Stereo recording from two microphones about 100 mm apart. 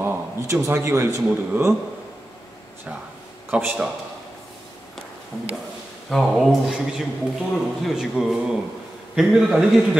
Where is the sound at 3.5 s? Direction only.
15° right (ahead or behind).